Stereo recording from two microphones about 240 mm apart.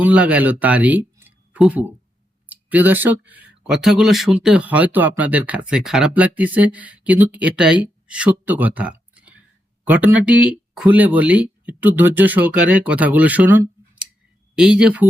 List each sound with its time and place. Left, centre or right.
0.0 s speech: centre